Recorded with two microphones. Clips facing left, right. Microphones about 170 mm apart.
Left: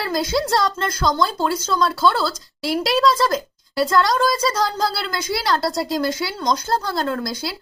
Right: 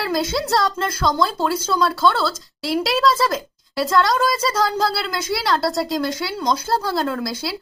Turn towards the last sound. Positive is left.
turn(degrees=-5)  # may be behind; listen again after turning